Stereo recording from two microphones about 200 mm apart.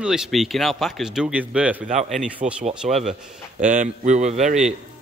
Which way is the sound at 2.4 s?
35° right (ahead or behind).